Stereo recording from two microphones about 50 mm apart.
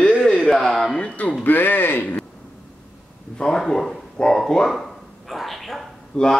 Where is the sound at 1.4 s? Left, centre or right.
Left.